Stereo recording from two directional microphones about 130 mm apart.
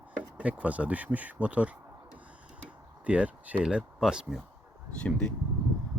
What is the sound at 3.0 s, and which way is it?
Speech, 10° right (ahead or behind).